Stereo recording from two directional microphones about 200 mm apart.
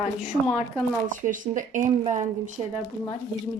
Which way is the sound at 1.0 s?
40° right (ahead or behind).